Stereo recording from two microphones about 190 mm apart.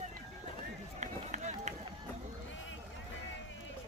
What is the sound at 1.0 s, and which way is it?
Run, 40° right (ahead or behind).